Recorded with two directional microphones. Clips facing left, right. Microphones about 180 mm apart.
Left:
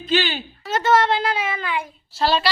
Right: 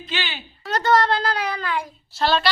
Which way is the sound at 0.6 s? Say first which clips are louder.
Left 1 dB; centre (ahead or behind).